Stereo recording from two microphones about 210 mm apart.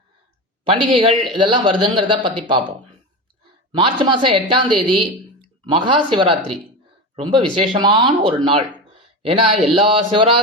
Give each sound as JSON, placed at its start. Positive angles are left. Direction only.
{"t": 0.6, "sound": "speech", "side_deg": -25}
{"t": 3.7, "sound": "speech", "side_deg": -20}